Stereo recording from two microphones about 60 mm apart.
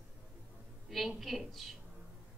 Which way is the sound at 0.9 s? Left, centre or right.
Centre.